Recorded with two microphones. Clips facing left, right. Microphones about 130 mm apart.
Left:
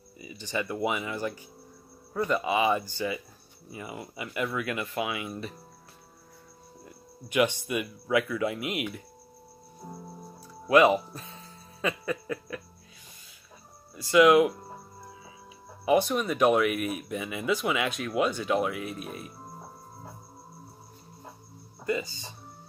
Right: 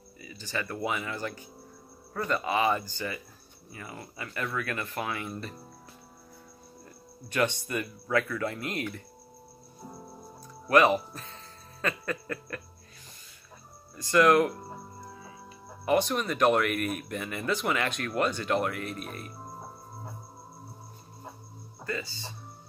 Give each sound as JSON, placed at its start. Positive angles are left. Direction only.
{"t": 0.2, "sound": "speech", "side_deg": 15}
{"t": 7.2, "sound": "speech", "side_deg": 10}
{"t": 10.7, "sound": "speech", "side_deg": 10}
{"t": 13.9, "sound": "speech", "side_deg": 5}
{"t": 15.8, "sound": "speech", "side_deg": 5}
{"t": 21.8, "sound": "speech", "side_deg": 20}